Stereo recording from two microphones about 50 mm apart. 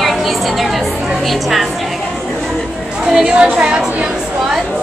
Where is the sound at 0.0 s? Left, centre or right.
Centre.